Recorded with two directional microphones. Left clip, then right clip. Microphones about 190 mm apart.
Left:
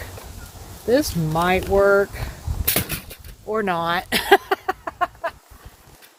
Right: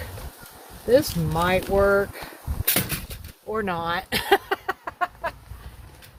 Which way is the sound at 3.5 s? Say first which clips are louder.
Left 4 dB; 45° left (ahead or behind).